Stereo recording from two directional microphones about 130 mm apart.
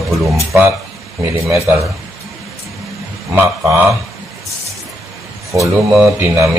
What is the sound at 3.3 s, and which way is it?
Speech, 15° right (ahead or behind).